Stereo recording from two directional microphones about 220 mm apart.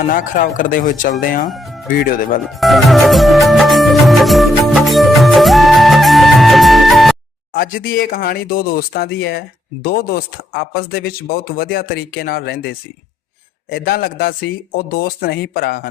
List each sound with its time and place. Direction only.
0.1 s speech: 35° left (ahead or behind)
1.5 s music: centre (ahead or behind)
1.9 s speech: 40° left (ahead or behind)
2.4 s music: centre (ahead or behind)
7.5 s speech: 40° left (ahead or behind)